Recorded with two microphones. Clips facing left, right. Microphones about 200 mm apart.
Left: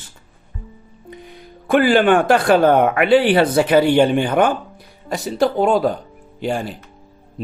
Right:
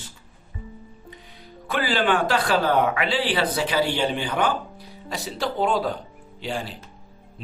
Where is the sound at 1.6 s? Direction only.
50° left (ahead or behind).